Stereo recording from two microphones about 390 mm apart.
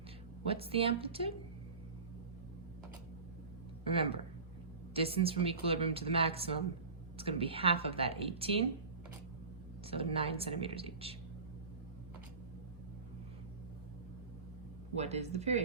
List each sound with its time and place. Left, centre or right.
0.4 s speech: centre
3.8 s speech: centre
9.9 s speech: centre
14.9 s speech: centre